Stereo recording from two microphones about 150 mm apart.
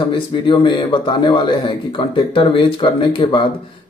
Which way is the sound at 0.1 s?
35° left (ahead or behind).